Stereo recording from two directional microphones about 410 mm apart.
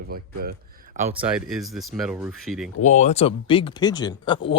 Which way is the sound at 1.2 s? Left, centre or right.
Centre.